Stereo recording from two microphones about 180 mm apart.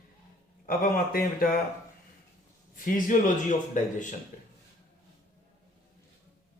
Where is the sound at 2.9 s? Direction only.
45° left (ahead or behind).